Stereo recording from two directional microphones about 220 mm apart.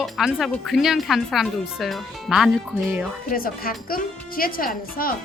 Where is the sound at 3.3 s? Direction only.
40° left (ahead or behind).